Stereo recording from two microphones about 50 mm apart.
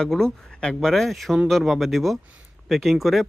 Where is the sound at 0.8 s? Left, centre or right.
Centre.